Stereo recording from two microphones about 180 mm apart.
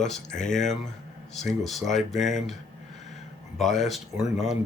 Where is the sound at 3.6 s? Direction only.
Centre (ahead or behind).